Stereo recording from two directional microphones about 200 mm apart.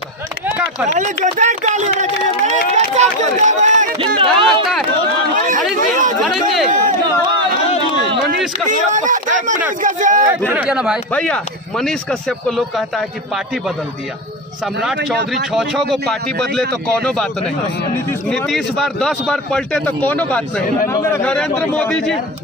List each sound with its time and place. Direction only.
0.9 s speech: 35° right (ahead or behind)
4.0 s speech: 25° right (ahead or behind)
5.4 s chatter: 40° right (ahead or behind)
5.8 s a sound: 40° right (ahead or behind)
6.2 s speech: centre (ahead or behind)
8.6 s speech: 40° right (ahead or behind)
10.5 s a man's voice: 5° right (ahead or behind)
15.5 s a man's voice: centre (ahead or behind)
18.3 s a man's voice: centre (ahead or behind)